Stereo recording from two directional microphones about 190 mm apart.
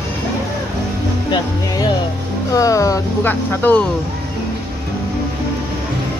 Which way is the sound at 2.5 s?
15° left (ahead or behind).